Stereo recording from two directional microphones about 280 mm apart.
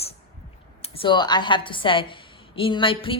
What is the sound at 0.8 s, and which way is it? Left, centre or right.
A woman's voice, centre.